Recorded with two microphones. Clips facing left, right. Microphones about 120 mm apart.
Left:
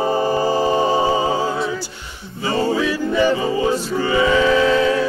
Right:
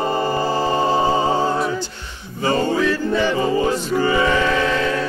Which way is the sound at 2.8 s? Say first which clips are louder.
Left 1 dB; 15° left (ahead or behind).